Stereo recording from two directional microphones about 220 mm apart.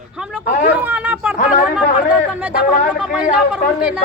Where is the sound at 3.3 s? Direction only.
5° right (ahead or behind).